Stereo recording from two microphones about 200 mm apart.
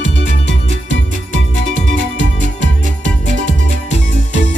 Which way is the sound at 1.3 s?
75° right (ahead or behind).